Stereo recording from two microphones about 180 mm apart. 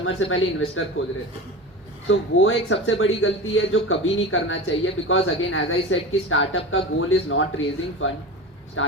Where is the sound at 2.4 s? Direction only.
90° left.